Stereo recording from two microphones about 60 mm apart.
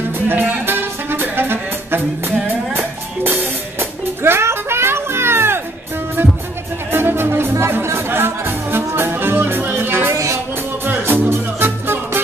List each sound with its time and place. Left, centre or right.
0.3 s music: right
4.2 s music: right
6.9 s music: right
10.1 s music: right
10.9 s music: right